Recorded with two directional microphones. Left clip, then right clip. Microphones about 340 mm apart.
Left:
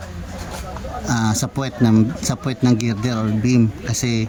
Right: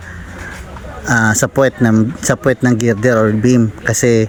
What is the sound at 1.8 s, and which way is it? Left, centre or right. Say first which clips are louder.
Speech: right 4 dB; centre.